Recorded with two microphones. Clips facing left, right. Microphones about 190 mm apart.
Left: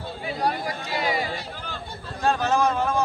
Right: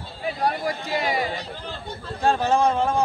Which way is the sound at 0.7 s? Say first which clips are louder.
Right 2 dB; 45° right (ahead or behind).